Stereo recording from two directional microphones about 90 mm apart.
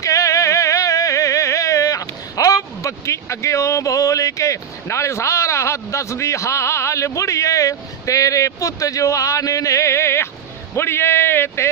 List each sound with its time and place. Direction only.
0.0 s music: 35° left (ahead or behind)
10.7 s speech: 30° left (ahead or behind)